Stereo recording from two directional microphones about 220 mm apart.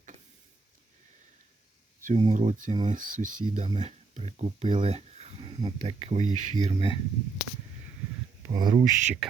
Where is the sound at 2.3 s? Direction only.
35° right (ahead or behind).